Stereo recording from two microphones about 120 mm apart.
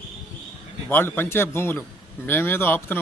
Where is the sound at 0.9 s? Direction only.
15° left (ahead or behind).